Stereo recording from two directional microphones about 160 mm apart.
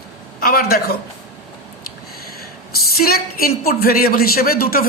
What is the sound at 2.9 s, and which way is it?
A woman's voice, 70° left (ahead or behind).